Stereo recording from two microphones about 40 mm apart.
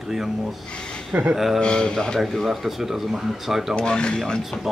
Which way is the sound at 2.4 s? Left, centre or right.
Centre.